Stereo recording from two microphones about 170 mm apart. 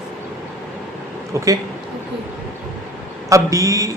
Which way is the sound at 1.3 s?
15° right (ahead or behind).